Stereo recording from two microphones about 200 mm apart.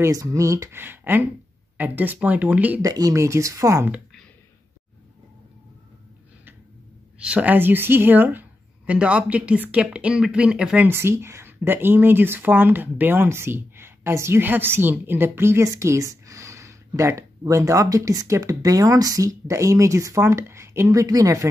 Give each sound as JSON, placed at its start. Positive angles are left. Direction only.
{"t": 0.0, "sound": "speech", "side_deg": -15}
{"t": 7.2, "sound": "speech", "side_deg": -5}